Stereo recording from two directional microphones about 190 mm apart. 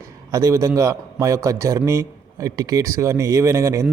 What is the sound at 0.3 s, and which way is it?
A man's voice, 15° right (ahead or behind).